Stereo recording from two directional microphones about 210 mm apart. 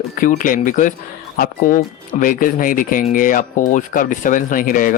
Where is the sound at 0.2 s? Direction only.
40° left (ahead or behind).